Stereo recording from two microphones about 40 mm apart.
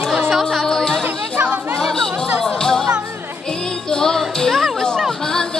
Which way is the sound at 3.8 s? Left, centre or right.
Centre.